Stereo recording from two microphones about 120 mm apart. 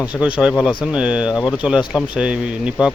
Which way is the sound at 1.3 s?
35° left (ahead or behind).